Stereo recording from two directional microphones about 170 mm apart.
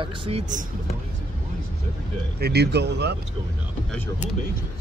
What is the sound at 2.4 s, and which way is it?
Speech, 70° right (ahead or behind).